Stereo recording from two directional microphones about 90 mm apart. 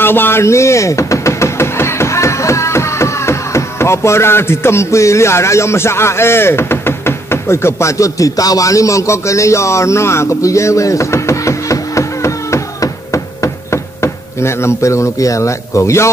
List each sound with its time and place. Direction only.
0.0 s music: 25° left (ahead or behind)